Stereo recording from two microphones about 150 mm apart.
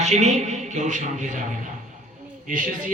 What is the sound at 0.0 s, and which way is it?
A man's voice, 50° right (ahead or behind).